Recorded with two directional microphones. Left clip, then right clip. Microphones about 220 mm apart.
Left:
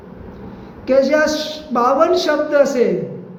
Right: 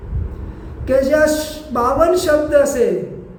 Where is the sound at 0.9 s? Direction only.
10° right (ahead or behind).